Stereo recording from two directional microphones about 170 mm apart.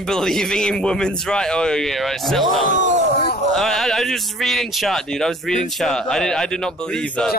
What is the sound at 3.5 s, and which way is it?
A man's voice, centre (ahead or behind).